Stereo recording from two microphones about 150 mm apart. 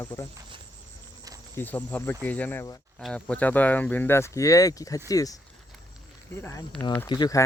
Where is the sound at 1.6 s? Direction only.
10° left (ahead or behind).